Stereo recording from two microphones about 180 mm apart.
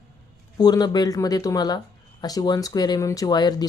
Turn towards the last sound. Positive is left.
turn(degrees=25)  # may be behind; listen again after turning